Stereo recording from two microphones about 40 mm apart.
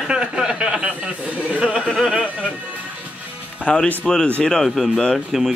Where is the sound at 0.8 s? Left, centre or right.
Right.